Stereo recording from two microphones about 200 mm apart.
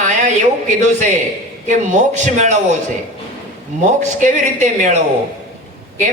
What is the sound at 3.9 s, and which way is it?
Speech, 40° right (ahead or behind).